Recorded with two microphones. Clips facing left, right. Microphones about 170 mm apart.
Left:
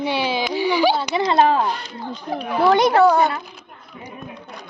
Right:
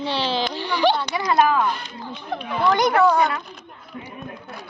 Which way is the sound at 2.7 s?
25° left (ahead or behind).